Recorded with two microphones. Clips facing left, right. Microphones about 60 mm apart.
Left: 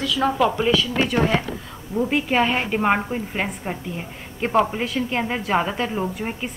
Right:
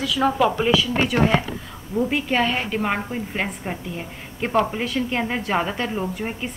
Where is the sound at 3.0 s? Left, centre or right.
Centre.